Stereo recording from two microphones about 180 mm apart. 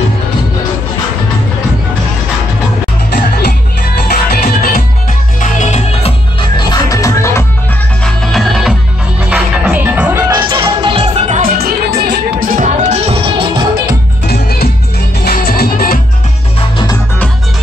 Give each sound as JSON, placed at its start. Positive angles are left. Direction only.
{"t": 4.1, "sound": "music", "side_deg": 55}
{"t": 5.4, "sound": "music", "side_deg": 40}
{"t": 6.7, "sound": "music", "side_deg": 20}
{"t": 8.0, "sound": "music", "side_deg": 0}
{"t": 10.3, "sound": "music", "side_deg": -25}
{"t": 14.2, "sound": "music", "side_deg": 60}